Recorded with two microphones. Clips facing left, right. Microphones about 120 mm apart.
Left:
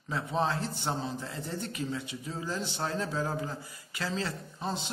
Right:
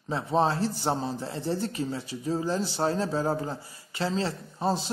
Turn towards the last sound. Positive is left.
turn(degrees=-35)  # may be behind; listen again after turning